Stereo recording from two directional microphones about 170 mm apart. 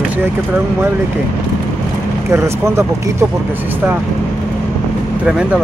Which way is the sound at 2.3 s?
15° right (ahead or behind).